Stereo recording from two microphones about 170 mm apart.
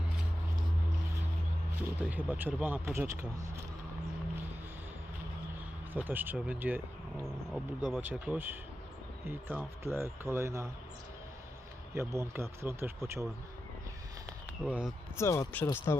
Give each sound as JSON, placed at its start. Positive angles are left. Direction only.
{"t": 2.0, "sound": "speech", "side_deg": -10}
{"t": 5.9, "sound": "speech", "side_deg": -10}
{"t": 11.9, "sound": "speech", "side_deg": -15}
{"t": 14.6, "sound": "speech", "side_deg": -5}
{"t": 15.2, "sound": "speech", "side_deg": 15}